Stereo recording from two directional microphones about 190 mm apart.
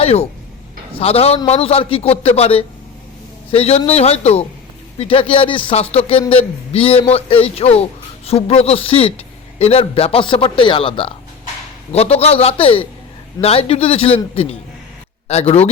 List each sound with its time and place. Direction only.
0.0 s a man's voice: 35° left (ahead or behind)